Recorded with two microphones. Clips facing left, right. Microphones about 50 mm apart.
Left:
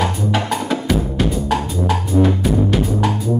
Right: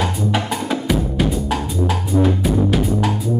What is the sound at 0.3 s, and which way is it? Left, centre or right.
Music, centre.